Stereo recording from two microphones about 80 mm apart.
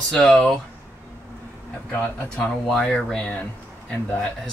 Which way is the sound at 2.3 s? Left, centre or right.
Centre.